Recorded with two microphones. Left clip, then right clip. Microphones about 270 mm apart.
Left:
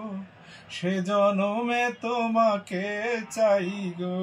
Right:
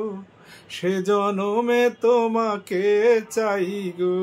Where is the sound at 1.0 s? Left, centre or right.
Centre.